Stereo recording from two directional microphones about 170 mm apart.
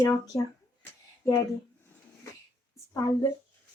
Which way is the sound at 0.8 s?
15° left (ahead or behind).